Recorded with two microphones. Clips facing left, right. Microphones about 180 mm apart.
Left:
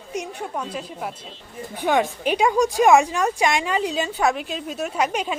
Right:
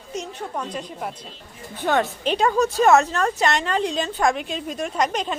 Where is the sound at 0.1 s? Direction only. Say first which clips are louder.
Left 1 dB; 10° left (ahead or behind).